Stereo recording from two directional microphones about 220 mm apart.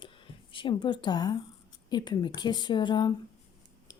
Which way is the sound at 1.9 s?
20° left (ahead or behind).